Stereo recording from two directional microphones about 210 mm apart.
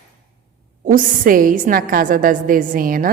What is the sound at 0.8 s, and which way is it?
A woman's voice, 40° right (ahead or behind).